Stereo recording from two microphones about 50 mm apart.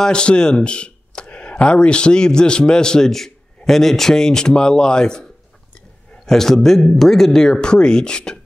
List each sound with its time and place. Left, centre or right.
0.0 s speech: centre
6.2 s speech: centre